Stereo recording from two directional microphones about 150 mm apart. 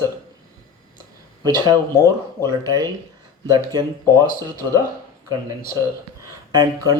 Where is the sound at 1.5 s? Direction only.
25° right (ahead or behind).